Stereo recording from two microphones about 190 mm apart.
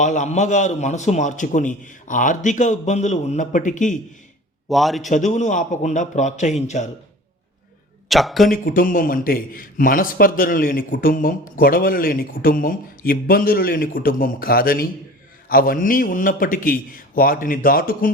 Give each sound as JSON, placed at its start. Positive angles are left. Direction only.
{"t": 0.0, "sound": "a man's voice", "side_deg": 40}
{"t": 4.7, "sound": "speech", "side_deg": 0}
{"t": 5.0, "sound": "a man's voice", "side_deg": 40}
{"t": 8.1, "sound": "speech", "side_deg": 0}
{"t": 8.4, "sound": "a man's voice", "side_deg": 50}